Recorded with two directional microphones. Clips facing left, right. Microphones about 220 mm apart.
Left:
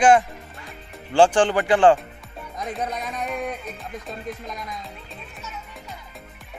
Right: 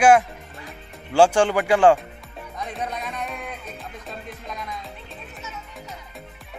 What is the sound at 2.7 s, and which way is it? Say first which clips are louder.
Music: left 2 dB; centre (ahead or behind).